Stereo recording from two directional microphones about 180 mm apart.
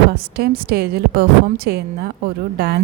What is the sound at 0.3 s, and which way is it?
A woman's voice, 60° right (ahead or behind).